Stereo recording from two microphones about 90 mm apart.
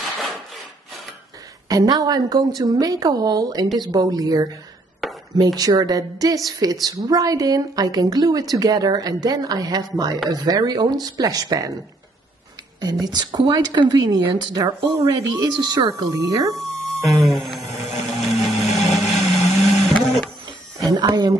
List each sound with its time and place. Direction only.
0.0 s wood: centre (ahead or behind)
1.7 s a woman's voice: 45° right (ahead or behind)
5.0 s a sound: centre (ahead or behind)
5.4 s a woman's voice: 45° right (ahead or behind)
12.8 s a woman's voice: 45° right (ahead or behind)
15.0 s a woman's voice: 40° right (ahead or behind)
16.6 s a sound: centre (ahead or behind)
20.9 s speech: 55° right (ahead or behind)